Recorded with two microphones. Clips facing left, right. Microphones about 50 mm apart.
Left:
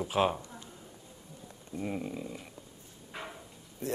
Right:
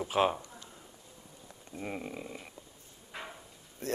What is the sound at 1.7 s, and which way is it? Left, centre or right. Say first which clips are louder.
Speech: left 3 dB; centre.